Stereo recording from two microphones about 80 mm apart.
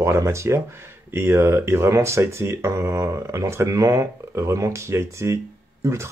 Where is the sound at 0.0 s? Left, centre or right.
Right.